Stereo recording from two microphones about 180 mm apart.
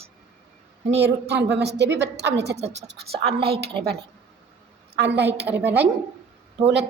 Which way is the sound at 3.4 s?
60° right (ahead or behind).